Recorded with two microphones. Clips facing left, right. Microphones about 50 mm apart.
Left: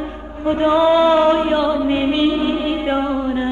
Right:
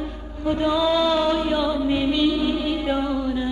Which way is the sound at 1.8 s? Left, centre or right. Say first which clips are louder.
Left 4 dB; left.